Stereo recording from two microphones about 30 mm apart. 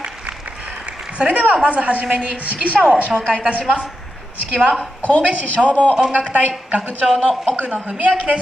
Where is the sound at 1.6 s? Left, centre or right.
Right.